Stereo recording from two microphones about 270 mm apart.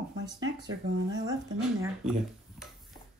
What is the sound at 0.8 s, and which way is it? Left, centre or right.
Speech, right.